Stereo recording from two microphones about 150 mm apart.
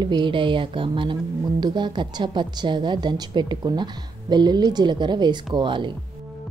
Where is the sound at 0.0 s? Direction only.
30° right (ahead or behind).